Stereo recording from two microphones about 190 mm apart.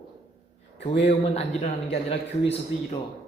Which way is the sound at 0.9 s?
30° left (ahead or behind).